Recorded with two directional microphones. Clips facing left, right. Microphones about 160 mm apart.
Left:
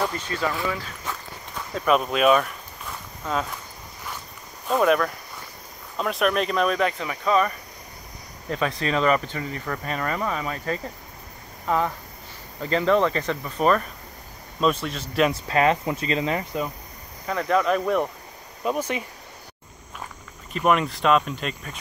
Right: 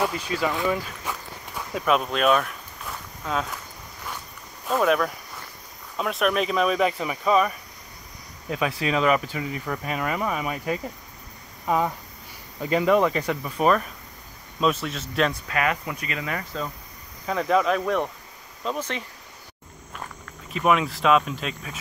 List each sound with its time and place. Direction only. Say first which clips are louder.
0.0 s speech: right 1 dB; 5° right (ahead or behind)
4.6 s speech: left 1 dB; centre (ahead or behind)
15.3 s speech: left 5 dB; 30° left (ahead or behind)
17.3 s speech: even; 5° right (ahead or behind)
20.5 s speech: even; centre (ahead or behind)